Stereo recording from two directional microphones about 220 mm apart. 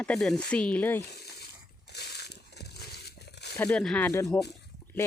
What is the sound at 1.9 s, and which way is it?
Crumpling, 50° left (ahead or behind).